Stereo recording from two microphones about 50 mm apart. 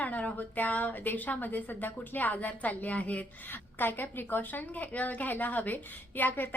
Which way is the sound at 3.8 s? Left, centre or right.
Left.